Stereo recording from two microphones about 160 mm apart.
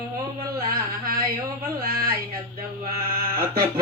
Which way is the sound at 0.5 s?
70° right (ahead or behind).